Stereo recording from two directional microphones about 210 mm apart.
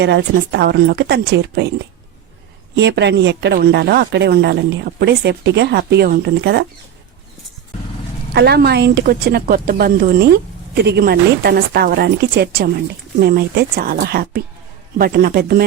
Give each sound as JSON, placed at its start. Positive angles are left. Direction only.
{"t": 0.0, "sound": "a woman's voice", "side_deg": -55}
{"t": 2.7, "sound": "a woman's voice", "side_deg": -55}
{"t": 8.3, "sound": "a woman's voice", "side_deg": -50}